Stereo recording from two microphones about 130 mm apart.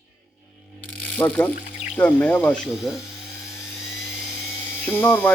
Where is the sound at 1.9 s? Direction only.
10° left (ahead or behind).